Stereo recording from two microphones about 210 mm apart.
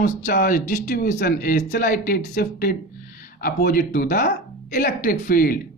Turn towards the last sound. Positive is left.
turn(degrees=45)  # may be behind; listen again after turning